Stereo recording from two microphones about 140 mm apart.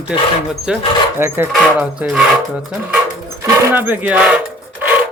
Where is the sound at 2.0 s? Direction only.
5° right (ahead or behind).